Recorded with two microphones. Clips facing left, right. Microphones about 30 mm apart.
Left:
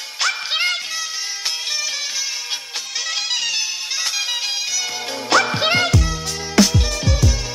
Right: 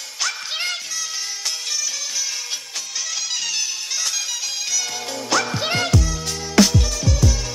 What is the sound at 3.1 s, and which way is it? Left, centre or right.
Music, left.